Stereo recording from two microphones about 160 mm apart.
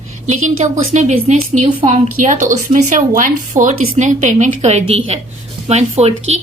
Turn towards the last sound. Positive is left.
turn(degrees=-40)  # may be behind; listen again after turning